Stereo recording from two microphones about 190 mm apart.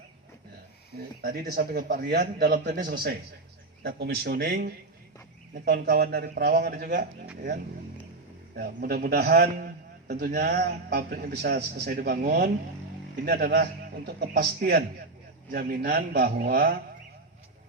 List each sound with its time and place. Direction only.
1.2 s a man's voice: 50° right (ahead or behind)
8.5 s a man's voice: 50° right (ahead or behind)